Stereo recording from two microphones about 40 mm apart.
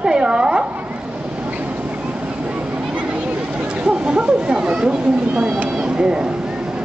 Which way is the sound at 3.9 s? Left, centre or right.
Right.